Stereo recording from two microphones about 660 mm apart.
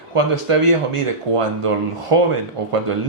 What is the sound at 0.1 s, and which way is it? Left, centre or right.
Speech, right.